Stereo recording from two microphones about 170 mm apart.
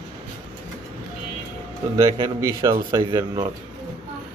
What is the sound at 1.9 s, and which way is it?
A man's voice, 20° right (ahead or behind).